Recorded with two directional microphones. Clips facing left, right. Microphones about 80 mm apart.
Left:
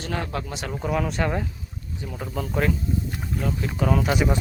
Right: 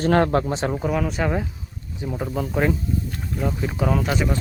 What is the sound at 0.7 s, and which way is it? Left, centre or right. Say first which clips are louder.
Speech: right 2 dB; centre.